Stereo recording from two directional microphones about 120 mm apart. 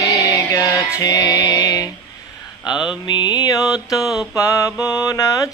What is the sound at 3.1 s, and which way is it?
Mantra, 35° left (ahead or behind).